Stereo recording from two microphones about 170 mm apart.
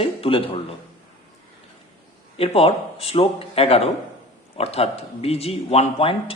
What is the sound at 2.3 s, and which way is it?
A man's voice, 35° left (ahead or behind).